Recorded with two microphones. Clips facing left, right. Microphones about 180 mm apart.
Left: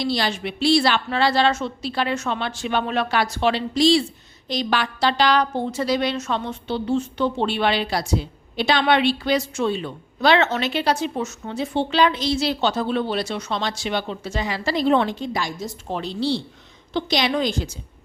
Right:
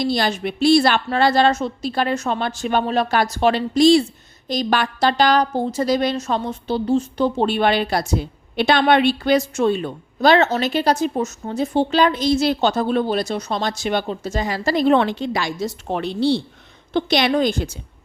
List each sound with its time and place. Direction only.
0.0 s a woman's voice: 50° right (ahead or behind)